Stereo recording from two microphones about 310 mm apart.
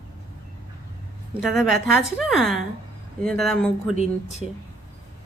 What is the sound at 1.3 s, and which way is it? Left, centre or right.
A woman's voice, centre.